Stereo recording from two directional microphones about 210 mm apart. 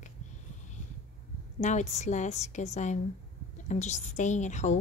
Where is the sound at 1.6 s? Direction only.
35° left (ahead or behind).